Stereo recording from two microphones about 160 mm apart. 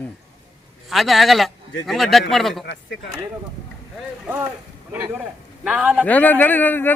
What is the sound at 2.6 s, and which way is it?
Speech, 90° left.